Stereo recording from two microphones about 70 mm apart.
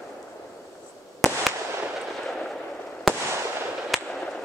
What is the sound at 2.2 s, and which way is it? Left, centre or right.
Artillery fire, centre.